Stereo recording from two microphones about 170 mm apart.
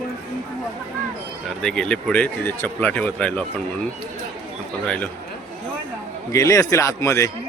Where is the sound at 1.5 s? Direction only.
5° left (ahead or behind).